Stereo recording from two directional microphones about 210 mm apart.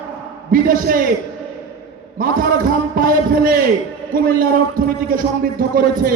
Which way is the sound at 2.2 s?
40° right (ahead or behind).